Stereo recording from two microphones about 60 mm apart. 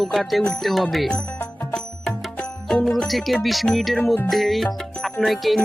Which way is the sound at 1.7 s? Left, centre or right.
Centre.